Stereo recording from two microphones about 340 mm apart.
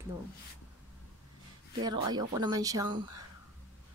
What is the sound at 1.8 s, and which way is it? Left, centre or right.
Speech, centre.